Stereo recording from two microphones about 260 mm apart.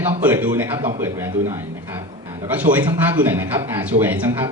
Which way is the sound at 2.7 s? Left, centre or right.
Centre.